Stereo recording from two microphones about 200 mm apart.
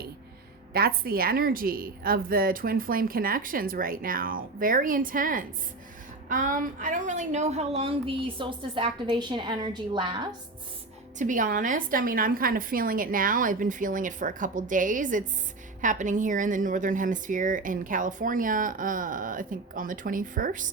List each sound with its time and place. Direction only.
0.7 s a woman's voice: 50° right (ahead or behind); by 10.2 s 20° right (ahead or behind)
11.2 s a woman's voice: 40° right (ahead or behind)